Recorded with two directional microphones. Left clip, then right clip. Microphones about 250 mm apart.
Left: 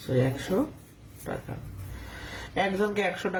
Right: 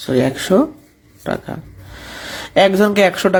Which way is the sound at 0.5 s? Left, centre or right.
Right.